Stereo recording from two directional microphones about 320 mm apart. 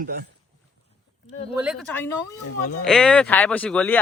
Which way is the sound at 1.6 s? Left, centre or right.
Centre.